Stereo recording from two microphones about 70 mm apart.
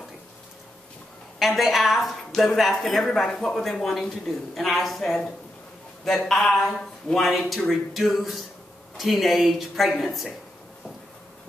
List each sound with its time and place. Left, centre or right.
1.4 s a woman's voice: centre